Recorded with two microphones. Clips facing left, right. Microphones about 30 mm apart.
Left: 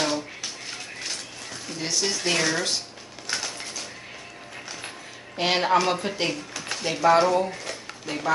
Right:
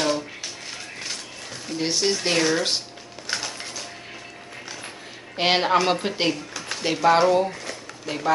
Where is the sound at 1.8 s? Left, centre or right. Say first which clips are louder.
Right 4 dB; right.